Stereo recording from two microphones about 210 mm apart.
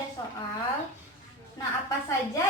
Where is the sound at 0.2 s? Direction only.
20° left (ahead or behind).